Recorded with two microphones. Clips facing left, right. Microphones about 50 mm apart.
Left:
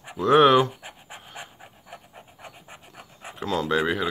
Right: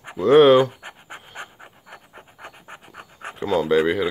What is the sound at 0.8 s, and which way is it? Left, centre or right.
Pant, right.